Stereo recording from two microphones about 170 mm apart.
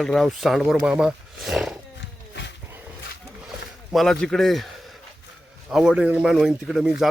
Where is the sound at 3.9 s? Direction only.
Centre (ahead or behind).